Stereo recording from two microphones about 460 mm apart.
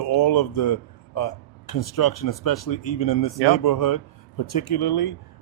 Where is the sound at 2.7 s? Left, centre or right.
Left.